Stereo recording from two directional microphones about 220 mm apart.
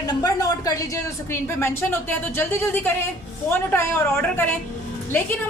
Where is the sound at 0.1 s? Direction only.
15° left (ahead or behind).